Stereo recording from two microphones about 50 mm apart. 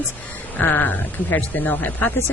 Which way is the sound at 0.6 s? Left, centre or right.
Left.